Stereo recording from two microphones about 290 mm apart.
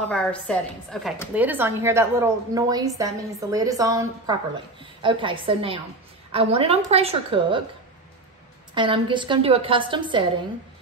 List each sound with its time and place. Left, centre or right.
0.1 s a woman's voice: centre
8.7 s speech: centre